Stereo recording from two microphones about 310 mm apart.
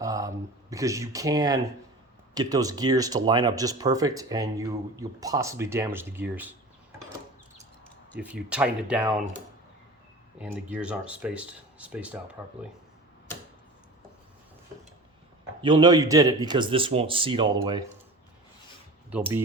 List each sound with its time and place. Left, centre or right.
0.0 s speech: centre
8.2 s speech: centre
10.3 s speech: centre
15.6 s speech: centre
19.1 s speech: centre